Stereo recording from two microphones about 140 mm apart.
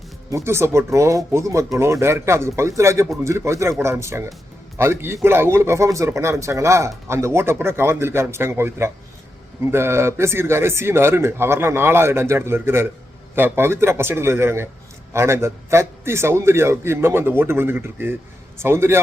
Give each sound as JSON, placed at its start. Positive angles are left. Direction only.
{"t": 0.3, "sound": "a man's voice", "side_deg": -20}